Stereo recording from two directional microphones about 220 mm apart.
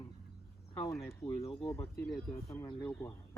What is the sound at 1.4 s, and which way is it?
Speech, 25° left (ahead or behind).